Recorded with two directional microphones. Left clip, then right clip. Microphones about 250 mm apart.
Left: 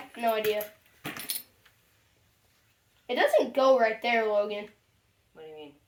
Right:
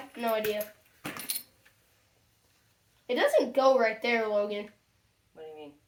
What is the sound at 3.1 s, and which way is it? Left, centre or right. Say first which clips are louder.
Speech: left 1 dB; left.